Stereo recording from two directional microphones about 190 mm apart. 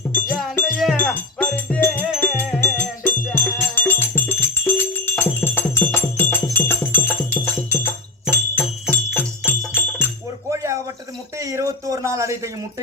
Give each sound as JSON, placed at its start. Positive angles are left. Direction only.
{"t": 0.1, "sound": "wind chime", "side_deg": 10}
{"t": 3.3, "sound": "music", "side_deg": 10}
{"t": 8.3, "sound": "music", "side_deg": 10}
{"t": 10.5, "sound": "a sound", "side_deg": -15}